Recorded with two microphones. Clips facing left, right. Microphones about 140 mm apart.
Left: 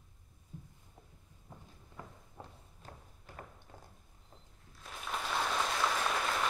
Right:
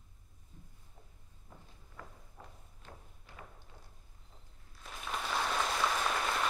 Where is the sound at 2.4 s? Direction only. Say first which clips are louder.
Left 3 dB; 25° left (ahead or behind).